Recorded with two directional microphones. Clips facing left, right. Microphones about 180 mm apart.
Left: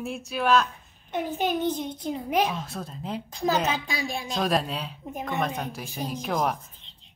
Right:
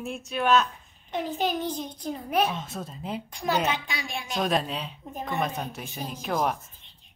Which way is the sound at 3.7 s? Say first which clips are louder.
Left 2 dB; 30° left (ahead or behind).